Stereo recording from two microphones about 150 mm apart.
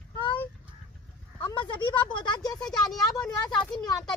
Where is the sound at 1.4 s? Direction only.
30° left (ahead or behind).